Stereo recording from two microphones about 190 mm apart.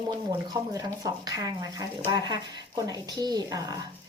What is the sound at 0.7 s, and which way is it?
Speech, 20° right (ahead or behind).